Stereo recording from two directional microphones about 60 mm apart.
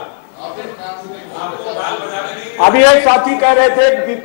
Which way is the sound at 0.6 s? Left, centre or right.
Left.